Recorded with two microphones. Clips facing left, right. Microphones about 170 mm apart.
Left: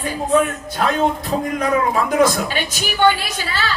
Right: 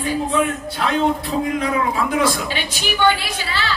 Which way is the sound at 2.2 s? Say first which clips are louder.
Left 4 dB; 45° left (ahead or behind).